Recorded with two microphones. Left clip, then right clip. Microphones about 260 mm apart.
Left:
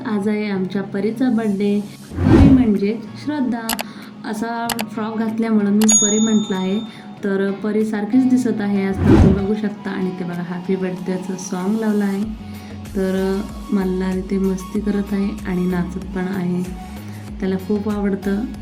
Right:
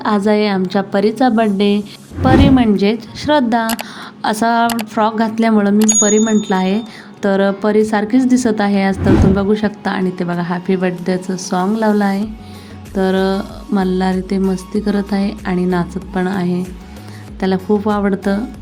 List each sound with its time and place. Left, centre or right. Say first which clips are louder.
0.0 s a woman's voice: right 9 dB; right
2.3 s speech: right 1 dB; centre
2.6 s a woman's voice: right 5 dB; right
9.0 s speech: left 2 dB; centre
9.6 s a woman's voice: right 7 dB; right